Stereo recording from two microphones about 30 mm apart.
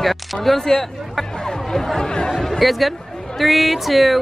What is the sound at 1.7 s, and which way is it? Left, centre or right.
Speech, centre.